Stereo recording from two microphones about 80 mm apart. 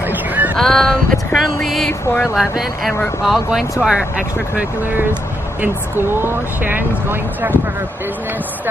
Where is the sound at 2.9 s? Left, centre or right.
Left.